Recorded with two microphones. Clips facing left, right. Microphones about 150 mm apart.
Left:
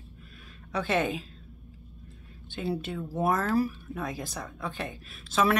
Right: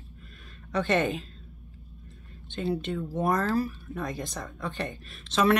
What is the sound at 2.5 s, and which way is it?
Speech, 10° left (ahead or behind).